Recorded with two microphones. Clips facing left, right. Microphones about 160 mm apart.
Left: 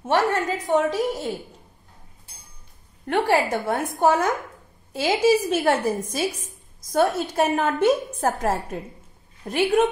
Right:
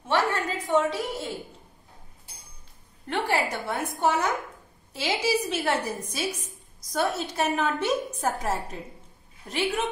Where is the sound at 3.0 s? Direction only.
50° left (ahead or behind).